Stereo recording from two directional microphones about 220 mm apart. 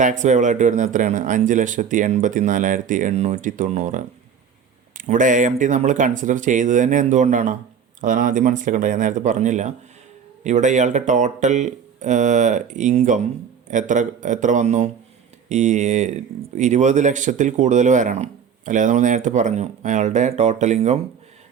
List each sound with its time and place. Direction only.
0.0 s speech: 35° right (ahead or behind)